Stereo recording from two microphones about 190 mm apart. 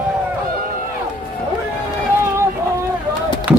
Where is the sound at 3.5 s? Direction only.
10° right (ahead or behind).